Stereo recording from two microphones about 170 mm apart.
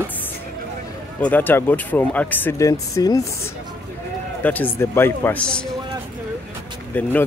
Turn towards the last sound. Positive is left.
turn(degrees=10)  # may be behind; listen again after turning